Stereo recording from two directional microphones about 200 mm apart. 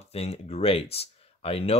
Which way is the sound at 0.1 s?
30° left (ahead or behind).